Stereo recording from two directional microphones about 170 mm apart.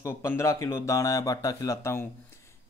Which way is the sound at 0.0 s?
15° left (ahead or behind).